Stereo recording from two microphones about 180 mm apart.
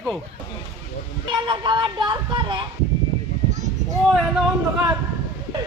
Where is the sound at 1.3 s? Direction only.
25° right (ahead or behind).